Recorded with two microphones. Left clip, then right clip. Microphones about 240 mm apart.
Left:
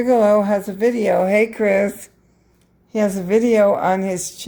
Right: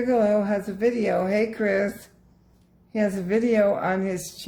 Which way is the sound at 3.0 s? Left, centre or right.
Left.